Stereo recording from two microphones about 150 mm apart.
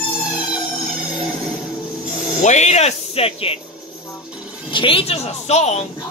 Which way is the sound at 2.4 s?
50° left (ahead or behind).